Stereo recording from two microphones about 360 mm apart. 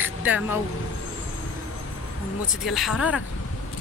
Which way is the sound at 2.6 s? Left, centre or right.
Centre.